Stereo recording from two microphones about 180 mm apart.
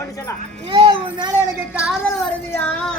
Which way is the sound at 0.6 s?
25° right (ahead or behind).